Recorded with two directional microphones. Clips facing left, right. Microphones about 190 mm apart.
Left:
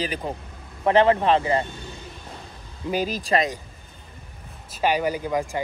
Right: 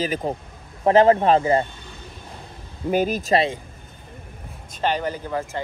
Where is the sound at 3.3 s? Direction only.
30° right (ahead or behind).